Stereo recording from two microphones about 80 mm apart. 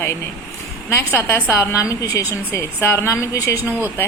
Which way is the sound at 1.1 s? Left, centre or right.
Left.